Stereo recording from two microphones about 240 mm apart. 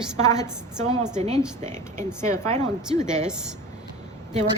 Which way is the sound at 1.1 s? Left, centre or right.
Right.